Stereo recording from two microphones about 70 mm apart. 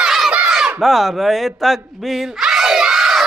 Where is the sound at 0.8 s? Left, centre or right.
Centre.